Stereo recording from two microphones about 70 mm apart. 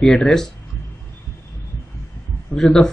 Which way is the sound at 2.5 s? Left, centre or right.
Left.